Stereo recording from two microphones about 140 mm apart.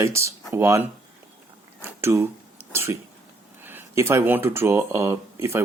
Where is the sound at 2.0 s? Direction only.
20° right (ahead or behind).